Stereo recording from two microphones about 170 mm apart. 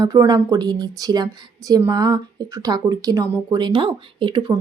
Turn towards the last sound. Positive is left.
turn(degrees=-30)  # may be behind; listen again after turning